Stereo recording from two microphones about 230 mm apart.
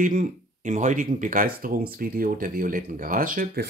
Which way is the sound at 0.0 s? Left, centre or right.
Right.